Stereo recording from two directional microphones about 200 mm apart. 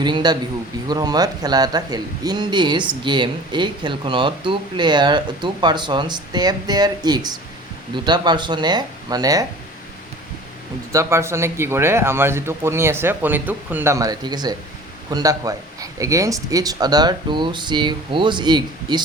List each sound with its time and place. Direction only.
0.0 s speech: 20° right (ahead or behind)
10.9 s a man's voice: 15° right (ahead or behind)